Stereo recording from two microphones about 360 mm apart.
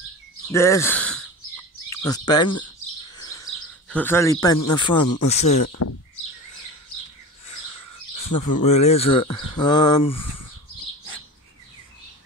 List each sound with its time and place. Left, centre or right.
0.5 s speech: centre
3.2 s chirp: centre
3.9 s speech: centre
4.9 s speech: left
7.4 s bird: left
8.6 s speech: centre
9.2 s speech: left
9.6 s speech: centre